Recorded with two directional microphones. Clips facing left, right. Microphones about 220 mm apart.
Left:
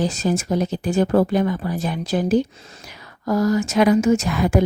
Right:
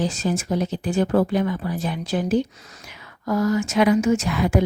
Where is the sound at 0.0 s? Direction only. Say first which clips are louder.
Left 2 dB; 40° left (ahead or behind).